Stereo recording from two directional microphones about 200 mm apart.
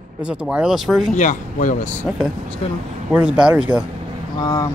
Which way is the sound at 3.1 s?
5° right (ahead or behind).